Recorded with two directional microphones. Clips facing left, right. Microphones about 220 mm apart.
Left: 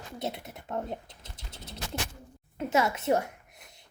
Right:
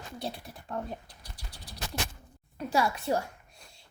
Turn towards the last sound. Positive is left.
turn(degrees=20)  # may be behind; listen again after turning